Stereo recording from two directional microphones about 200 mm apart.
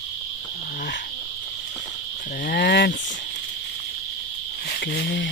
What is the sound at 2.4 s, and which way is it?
Cricket, 50° left (ahead or behind).